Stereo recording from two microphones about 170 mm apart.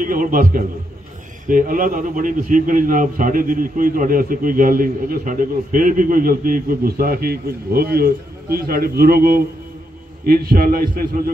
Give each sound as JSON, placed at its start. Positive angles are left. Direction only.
{"t": 0.0, "sound": "a man's voice", "side_deg": -55}